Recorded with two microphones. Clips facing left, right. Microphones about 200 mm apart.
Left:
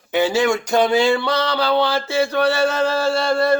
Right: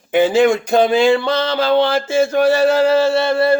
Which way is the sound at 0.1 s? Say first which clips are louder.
Right 5 dB; 50° right (ahead or behind).